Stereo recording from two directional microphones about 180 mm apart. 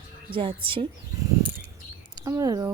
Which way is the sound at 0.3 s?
30° right (ahead or behind).